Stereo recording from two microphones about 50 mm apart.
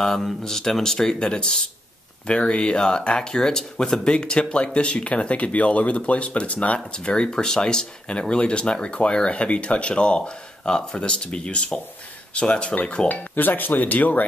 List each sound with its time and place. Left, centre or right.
0.0 s speech: centre
13.1 s speech: left